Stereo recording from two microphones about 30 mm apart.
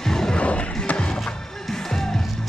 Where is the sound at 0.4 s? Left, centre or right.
Left.